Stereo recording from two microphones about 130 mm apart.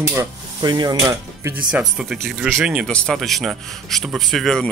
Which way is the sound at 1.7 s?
5° right (ahead or behind).